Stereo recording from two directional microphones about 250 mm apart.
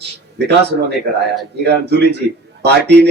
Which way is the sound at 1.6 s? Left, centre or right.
Right.